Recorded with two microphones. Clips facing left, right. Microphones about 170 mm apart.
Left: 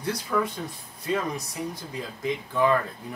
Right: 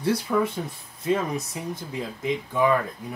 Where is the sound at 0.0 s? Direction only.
30° right (ahead or behind).